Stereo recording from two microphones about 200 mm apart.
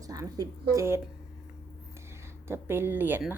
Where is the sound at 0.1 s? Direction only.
20° right (ahead or behind).